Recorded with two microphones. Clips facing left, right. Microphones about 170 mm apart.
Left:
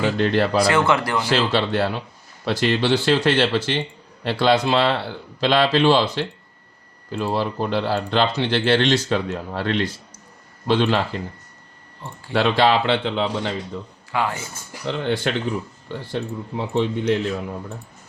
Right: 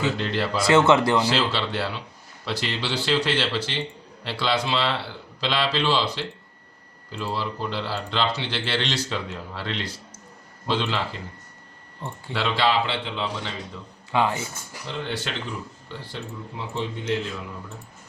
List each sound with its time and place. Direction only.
0.0 s speech: 55° left (ahead or behind)
0.7 s speech: 25° right (ahead or behind)
1.3 s speech: 50° left (ahead or behind)
12.3 s speech: 50° left (ahead or behind)
14.1 s speech: 20° right (ahead or behind)
14.8 s speech: 55° left (ahead or behind)